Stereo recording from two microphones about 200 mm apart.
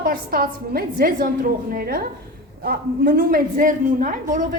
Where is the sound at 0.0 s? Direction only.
45° right (ahead or behind).